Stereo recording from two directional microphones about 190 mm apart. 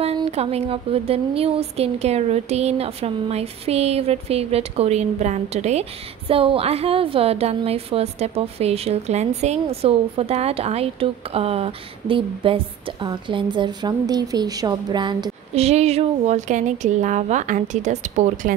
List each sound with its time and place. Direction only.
0.0 s speech: 35° right (ahead or behind)
15.5 s speech: 35° right (ahead or behind)